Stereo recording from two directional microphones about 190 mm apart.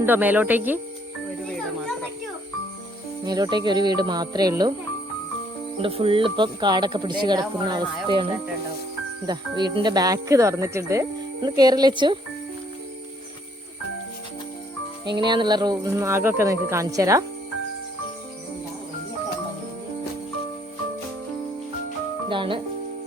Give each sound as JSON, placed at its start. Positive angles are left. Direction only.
{"t": 0.0, "sound": "speech", "side_deg": -10}
{"t": 3.2, "sound": "speech", "side_deg": -20}
{"t": 5.8, "sound": "speech", "side_deg": -30}
{"t": 15.2, "sound": "speech", "side_deg": -25}
{"t": 22.3, "sound": "speech", "side_deg": -25}